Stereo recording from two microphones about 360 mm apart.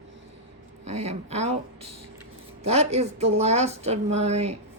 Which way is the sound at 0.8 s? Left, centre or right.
Centre.